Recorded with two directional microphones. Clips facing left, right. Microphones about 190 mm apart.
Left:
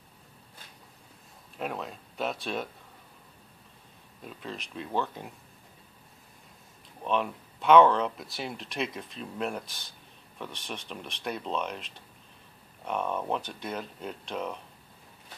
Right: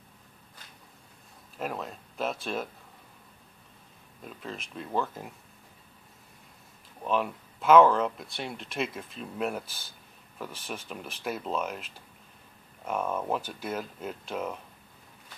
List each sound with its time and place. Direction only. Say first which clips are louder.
1.6 s speech: even; centre (ahead or behind)
4.2 s speech: even; centre (ahead or behind)
7.1 s speech: even; 5° right (ahead or behind)